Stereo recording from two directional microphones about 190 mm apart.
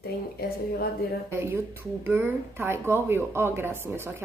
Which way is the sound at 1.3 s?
15° right (ahead or behind).